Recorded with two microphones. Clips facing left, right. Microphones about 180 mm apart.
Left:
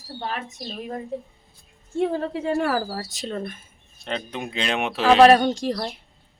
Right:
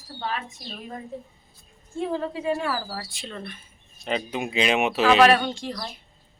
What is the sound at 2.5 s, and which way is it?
Speech, 55° left (ahead or behind).